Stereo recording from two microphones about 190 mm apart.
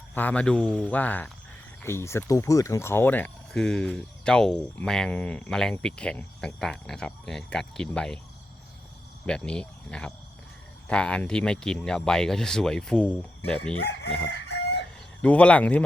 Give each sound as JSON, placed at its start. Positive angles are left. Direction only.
{"t": 0.1, "sound": "speech", "side_deg": 10}
{"t": 9.2, "sound": "speech", "side_deg": 5}
{"t": 14.3, "sound": "chicken", "side_deg": 60}
{"t": 15.2, "sound": "speech", "side_deg": 5}